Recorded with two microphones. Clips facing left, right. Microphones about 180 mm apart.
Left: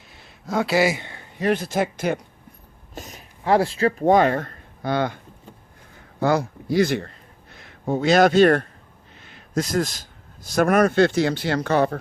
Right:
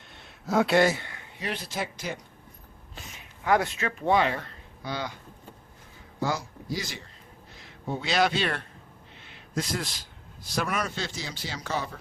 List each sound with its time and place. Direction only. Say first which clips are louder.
0.1 s a sound: even; centre (ahead or behind)
1.4 s speech: left 11 dB; 50° left (ahead or behind)
2.9 s a man's voice: left 8 dB; 40° left (ahead or behind); by 11.9 s 60° left (ahead or behind)